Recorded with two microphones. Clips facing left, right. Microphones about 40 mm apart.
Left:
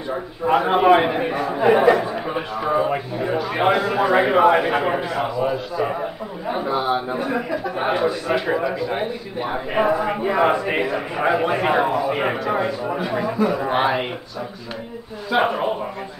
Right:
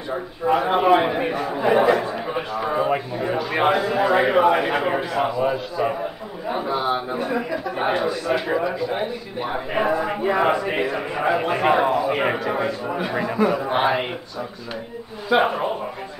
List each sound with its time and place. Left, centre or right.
0.1 s a man's voice: centre
15.2 s a man's voice: centre